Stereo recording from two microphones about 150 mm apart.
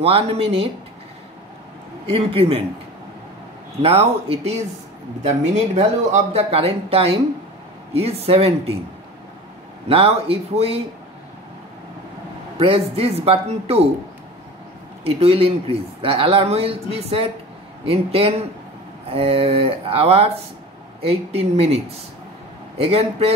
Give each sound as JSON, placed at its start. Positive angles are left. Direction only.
{"t": 0.0, "sound": "speech", "side_deg": -40}
{"t": 2.0, "sound": "speech", "side_deg": -40}
{"t": 3.8, "sound": "speech", "side_deg": -40}
{"t": 9.8, "sound": "speech", "side_deg": -40}
{"t": 12.5, "sound": "speech", "side_deg": -40}
{"t": 15.0, "sound": "speech", "side_deg": -40}